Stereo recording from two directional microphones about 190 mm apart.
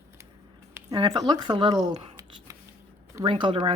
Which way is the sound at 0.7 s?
10° right (ahead or behind).